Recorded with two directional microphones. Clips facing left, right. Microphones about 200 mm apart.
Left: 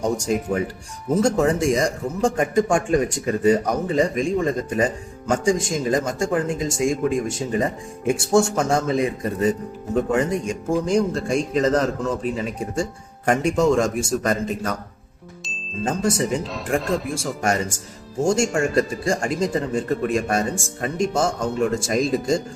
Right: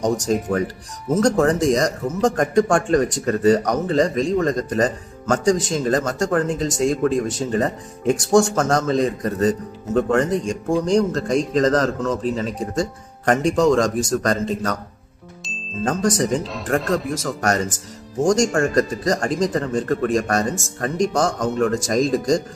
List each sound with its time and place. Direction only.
0.0 s a man's voice: 10° left (ahead or behind)
15.4 s music: 5° left (ahead or behind)
16.2 s speech: 40° right (ahead or behind)
16.5 s a man's voice: 5° left (ahead or behind)